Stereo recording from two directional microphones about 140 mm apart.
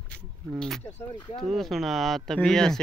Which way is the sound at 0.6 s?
Centre (ahead or behind).